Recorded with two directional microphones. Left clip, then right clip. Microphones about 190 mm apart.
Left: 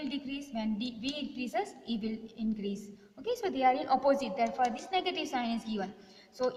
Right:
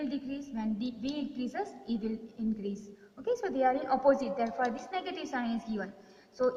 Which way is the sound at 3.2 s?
50° left (ahead or behind).